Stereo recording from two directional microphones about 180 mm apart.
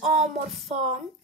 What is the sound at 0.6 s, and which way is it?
Speech, 40° right (ahead or behind).